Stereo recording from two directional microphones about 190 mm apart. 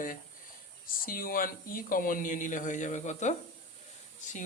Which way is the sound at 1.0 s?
50° left (ahead or behind).